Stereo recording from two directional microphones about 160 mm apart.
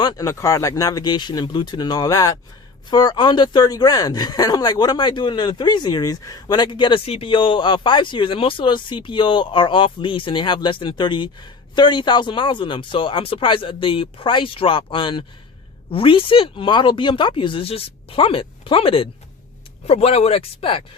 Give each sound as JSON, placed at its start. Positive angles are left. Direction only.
{"t": 0.0, "sound": "speech", "side_deg": 25}